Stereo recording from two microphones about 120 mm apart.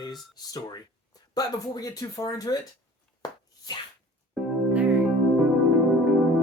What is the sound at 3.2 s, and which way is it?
Chopping, 35° left (ahead or behind).